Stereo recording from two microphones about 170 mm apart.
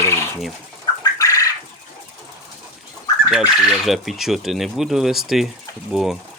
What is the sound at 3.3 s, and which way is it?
Speech, centre (ahead or behind).